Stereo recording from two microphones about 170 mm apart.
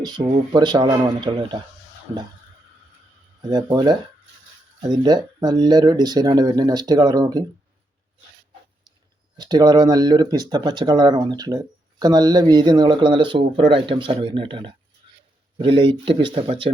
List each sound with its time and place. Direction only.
0.0 s speech: 30° right (ahead or behind)
3.5 s speech: 25° right (ahead or behind)
9.4 s speech: 25° right (ahead or behind)